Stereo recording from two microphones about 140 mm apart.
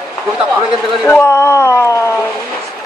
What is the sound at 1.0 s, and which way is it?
A woman's voice, 15° left (ahead or behind).